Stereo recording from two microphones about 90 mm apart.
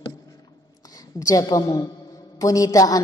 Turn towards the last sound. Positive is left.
turn(degrees=45)  # may be behind; listen again after turning